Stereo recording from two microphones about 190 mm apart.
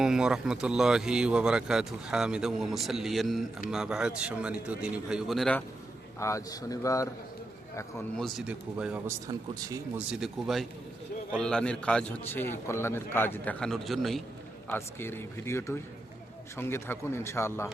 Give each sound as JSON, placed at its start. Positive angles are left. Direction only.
{"t": 0.0, "sound": "speech", "side_deg": -5}
{"t": 6.1, "sound": "a man's voice", "side_deg": 15}
{"t": 8.2, "sound": "speech", "side_deg": -5}
{"t": 9.2, "sound": "speech", "side_deg": -15}
{"t": 10.1, "sound": "a man's voice", "side_deg": 0}
{"t": 14.7, "sound": "a man's voice", "side_deg": 10}